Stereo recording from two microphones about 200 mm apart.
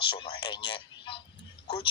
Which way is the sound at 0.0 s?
25° left (ahead or behind).